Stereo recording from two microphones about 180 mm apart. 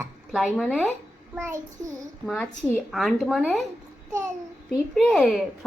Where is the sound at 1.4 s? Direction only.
15° right (ahead or behind).